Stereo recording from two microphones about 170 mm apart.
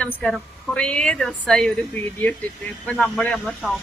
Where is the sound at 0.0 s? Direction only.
10° left (ahead or behind).